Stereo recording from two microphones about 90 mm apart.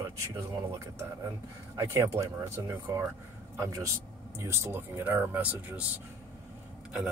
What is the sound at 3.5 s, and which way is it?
A man's voice, 35° right (ahead or behind).